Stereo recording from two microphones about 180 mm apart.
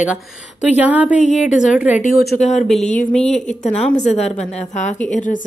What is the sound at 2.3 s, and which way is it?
Speech, 40° left (ahead or behind).